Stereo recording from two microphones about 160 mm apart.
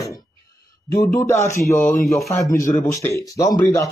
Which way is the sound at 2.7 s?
15° left (ahead or behind).